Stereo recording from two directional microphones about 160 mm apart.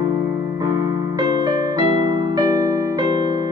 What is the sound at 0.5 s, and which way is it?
Keyboard, 25° right (ahead or behind).